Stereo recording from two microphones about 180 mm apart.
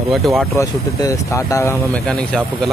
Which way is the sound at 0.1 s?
Centre (ahead or behind).